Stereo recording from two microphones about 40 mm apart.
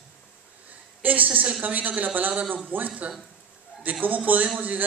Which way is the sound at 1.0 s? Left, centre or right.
Right.